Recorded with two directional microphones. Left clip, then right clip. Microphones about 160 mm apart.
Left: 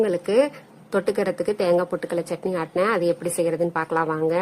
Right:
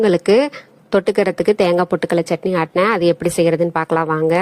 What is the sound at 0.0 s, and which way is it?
A woman's voice, 45° right (ahead or behind).